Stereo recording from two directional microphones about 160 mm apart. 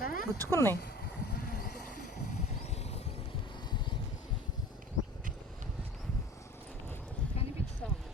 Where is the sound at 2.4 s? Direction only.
45° left (ahead or behind).